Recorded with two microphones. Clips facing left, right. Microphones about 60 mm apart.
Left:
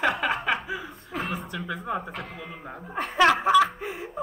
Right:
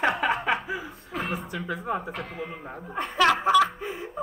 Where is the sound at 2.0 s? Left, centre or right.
Centre.